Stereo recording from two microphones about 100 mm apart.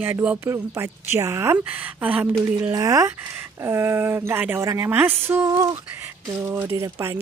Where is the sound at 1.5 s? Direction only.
15° right (ahead or behind).